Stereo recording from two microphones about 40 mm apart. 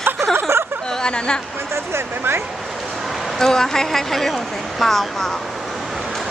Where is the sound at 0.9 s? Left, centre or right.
Centre.